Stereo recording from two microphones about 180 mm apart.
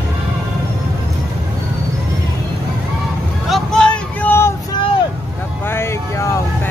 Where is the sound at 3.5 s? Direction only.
5° left (ahead or behind).